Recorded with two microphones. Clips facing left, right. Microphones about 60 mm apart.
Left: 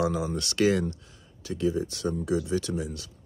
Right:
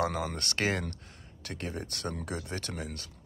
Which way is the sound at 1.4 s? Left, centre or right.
Right.